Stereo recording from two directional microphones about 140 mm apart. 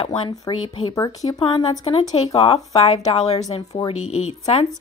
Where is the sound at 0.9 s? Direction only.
25° left (ahead or behind).